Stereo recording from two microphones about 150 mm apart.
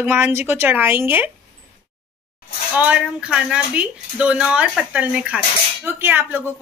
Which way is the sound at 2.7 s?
10° right (ahead or behind).